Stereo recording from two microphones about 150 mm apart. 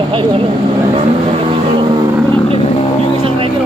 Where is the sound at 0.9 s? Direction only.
35° right (ahead or behind).